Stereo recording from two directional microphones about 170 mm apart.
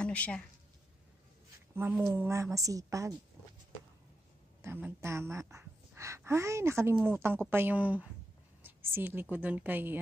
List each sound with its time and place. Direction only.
0.0 s speech: 5° left (ahead or behind)
1.8 s a woman's voice: 15° right (ahead or behind)
4.6 s a woman's voice: 15° right (ahead or behind)